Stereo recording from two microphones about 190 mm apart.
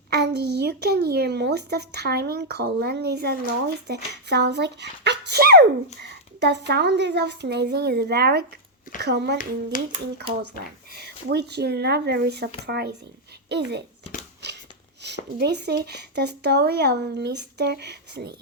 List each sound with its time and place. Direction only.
0.1 s speech: 60° right (ahead or behind)
9.7 s speech: 45° left (ahead or behind)
10.9 s speech: 60° right (ahead or behind)
14.4 s a sound: 65° right (ahead or behind)
15.4 s speech: 60° right (ahead or behind)